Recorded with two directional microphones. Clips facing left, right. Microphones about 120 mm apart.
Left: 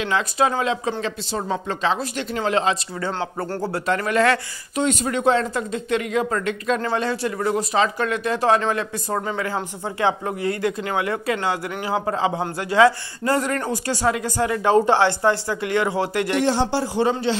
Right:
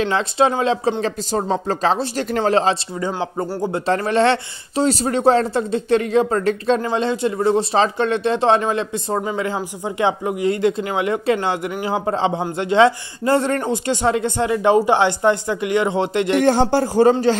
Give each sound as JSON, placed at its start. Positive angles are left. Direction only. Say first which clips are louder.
{"t": 0.0, "sound": "a man's voice", "louder": "right 3 dB", "side_deg": -30}
{"t": 3.0, "sound": "speech", "louder": "right 3 dB", "side_deg": -15}
{"t": 3.7, "sound": "a man's voice", "louder": "right 3 dB", "side_deg": -30}
{"t": 6.8, "sound": "a man's voice", "louder": "right 3 dB", "side_deg": -20}
{"t": 16.4, "sound": "a man's voice", "louder": "right 5 dB", "side_deg": -50}